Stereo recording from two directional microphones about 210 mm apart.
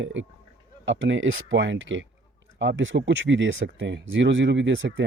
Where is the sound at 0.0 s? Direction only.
65° right (ahead or behind).